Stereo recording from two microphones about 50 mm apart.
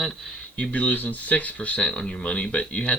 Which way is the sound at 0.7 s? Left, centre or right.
Left.